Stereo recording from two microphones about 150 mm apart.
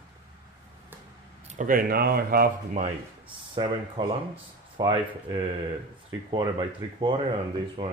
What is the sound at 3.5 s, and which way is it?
Speech, 30° right (ahead or behind).